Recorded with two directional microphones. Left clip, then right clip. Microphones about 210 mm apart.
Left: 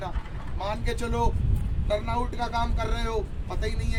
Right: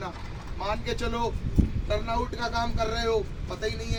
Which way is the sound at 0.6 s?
30° left (ahead or behind).